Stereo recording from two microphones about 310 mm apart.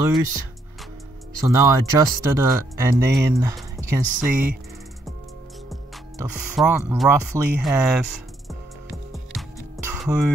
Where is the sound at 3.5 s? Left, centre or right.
Centre.